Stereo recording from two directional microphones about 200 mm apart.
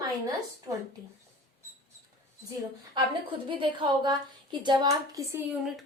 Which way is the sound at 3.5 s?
25° right (ahead or behind).